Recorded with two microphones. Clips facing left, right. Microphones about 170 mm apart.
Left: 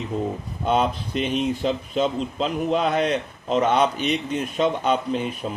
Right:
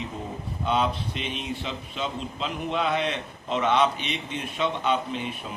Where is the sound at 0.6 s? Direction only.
45° left (ahead or behind).